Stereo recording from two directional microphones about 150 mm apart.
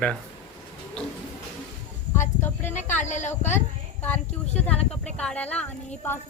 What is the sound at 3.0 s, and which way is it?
Speech, 50° left (ahead or behind).